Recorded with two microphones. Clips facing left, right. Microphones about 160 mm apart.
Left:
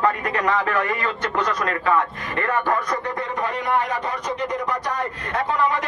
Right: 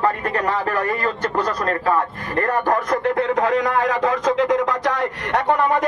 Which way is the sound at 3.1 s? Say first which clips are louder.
Right 8 dB; 75° right (ahead or behind).